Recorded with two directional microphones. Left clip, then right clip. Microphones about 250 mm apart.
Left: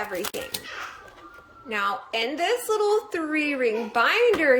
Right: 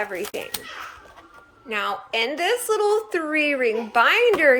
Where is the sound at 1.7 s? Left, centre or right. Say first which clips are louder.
Right 1 dB; centre.